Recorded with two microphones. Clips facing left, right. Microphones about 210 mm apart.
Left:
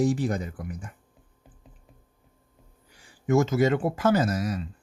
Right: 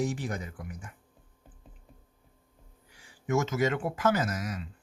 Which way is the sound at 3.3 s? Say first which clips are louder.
Left 6 dB; 35° left (ahead or behind).